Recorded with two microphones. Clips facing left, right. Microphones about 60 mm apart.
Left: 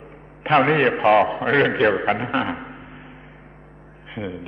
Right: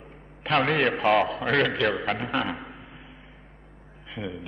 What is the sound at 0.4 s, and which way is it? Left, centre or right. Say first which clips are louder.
A man's voice: left 6 dB; centre.